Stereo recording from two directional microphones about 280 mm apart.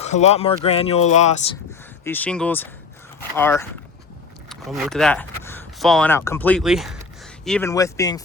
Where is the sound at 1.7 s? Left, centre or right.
Centre.